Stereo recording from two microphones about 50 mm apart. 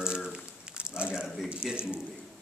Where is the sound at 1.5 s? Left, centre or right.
Right.